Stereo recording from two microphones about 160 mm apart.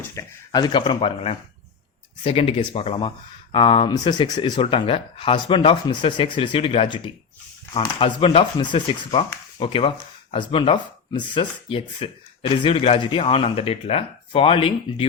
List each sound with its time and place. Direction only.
0.0 s speech: 20° left (ahead or behind); by 15.0 s 35° left (ahead or behind)